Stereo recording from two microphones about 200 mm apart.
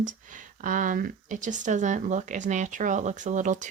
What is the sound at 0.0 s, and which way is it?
Speech, 40° right (ahead or behind).